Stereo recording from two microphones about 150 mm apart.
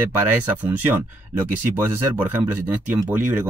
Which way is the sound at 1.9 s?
15° right (ahead or behind).